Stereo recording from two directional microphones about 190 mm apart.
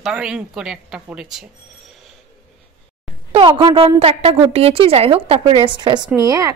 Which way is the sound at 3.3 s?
25° right (ahead or behind).